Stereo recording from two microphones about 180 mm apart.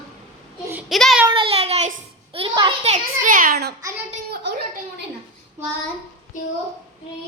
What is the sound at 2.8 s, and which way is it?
Speech, 45° right (ahead or behind).